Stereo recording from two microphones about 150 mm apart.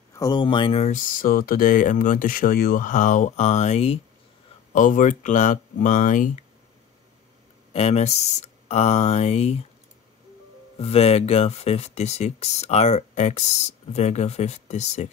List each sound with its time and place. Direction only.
0.1 s speech: 25° left (ahead or behind); by 1.0 s 45° left (ahead or behind)
1.2 s speech: 75° left (ahead or behind); by 4.0 s 45° left (ahead or behind)
4.7 s speech: 60° left (ahead or behind)
7.7 s speech: 45° left (ahead or behind)
10.8 s speech: 45° left (ahead or behind)